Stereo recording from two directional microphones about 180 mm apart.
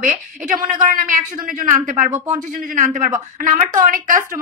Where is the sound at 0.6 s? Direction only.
45° right (ahead or behind).